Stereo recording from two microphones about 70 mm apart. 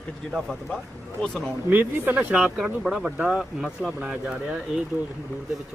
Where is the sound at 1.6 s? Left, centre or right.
Right.